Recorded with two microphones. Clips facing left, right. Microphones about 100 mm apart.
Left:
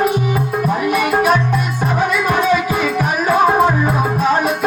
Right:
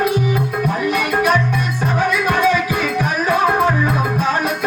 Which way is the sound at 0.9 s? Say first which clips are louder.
Left 2 dB; 15° left (ahead or behind).